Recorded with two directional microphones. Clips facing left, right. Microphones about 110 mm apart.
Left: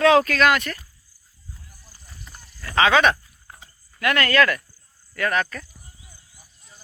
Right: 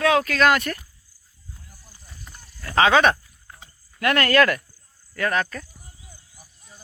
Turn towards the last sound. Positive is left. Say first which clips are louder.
# even
turn(degrees=-30)  # may be behind; listen again after turning